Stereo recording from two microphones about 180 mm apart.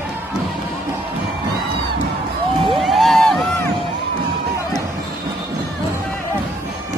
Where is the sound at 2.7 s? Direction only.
Centre (ahead or behind).